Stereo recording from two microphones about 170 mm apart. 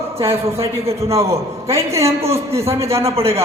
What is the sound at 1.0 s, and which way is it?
A man's voice, 15° right (ahead or behind).